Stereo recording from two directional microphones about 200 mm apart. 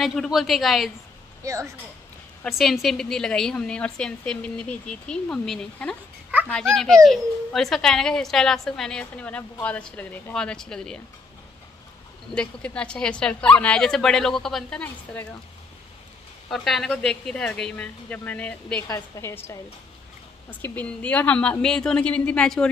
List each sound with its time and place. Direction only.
0.0 s a child's voice: centre (ahead or behind)
1.4 s speech: 15° right (ahead or behind)
2.4 s a child's voice: centre (ahead or behind)
12.3 s a child's voice: 5° left (ahead or behind)
16.4 s a child's voice: centre (ahead or behind)